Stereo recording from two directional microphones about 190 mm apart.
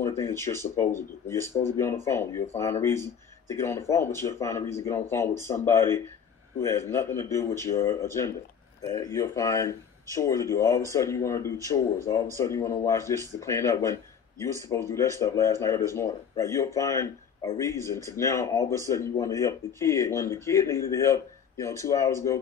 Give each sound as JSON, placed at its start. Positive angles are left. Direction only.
{"t": 0.2, "sound": "speech", "side_deg": 15}